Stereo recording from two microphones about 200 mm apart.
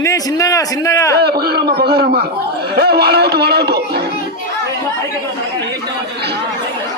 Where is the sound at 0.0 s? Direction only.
15° left (ahead or behind).